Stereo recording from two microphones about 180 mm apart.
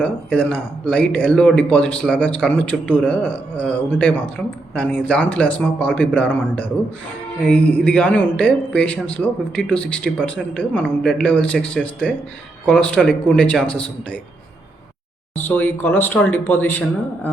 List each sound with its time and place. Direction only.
0.0 s a man's voice: 5° left (ahead or behind)
15.4 s speech: 10° left (ahead or behind)